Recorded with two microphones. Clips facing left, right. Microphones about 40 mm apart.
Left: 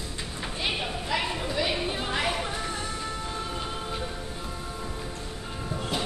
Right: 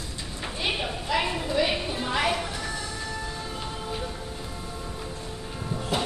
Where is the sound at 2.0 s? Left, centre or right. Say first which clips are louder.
Right 5 dB; centre.